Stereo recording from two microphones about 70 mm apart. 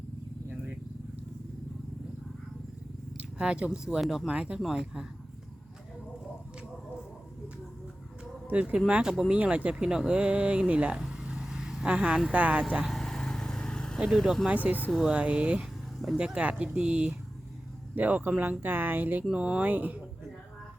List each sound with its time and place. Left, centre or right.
3.2 s speech: centre
4.0 s speech: centre
4.3 s speech: centre
8.4 s speech: right
11.0 s vehicle: centre
12.8 s vehicle: centre
14.1 s speech: centre
14.5 s speech: right
19.3 s speech: centre
19.6 s speech: right